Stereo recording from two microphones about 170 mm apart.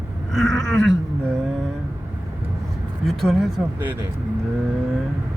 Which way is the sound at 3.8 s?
10° right (ahead or behind).